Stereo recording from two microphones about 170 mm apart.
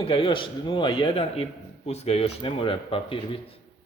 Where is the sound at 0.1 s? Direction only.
30° left (ahead or behind).